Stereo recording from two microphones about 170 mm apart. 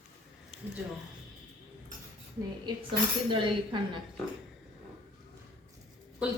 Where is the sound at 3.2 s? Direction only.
30° right (ahead or behind).